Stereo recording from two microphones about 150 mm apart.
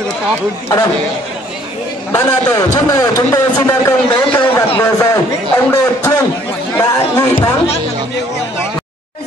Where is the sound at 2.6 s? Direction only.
25° left (ahead or behind).